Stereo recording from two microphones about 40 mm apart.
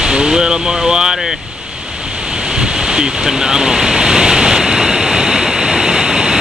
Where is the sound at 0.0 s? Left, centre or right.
Centre.